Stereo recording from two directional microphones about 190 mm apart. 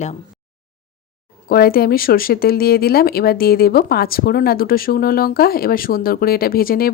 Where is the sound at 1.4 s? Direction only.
50° left (ahead or behind).